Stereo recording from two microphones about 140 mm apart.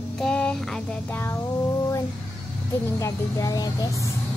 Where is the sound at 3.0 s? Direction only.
25° left (ahead or behind).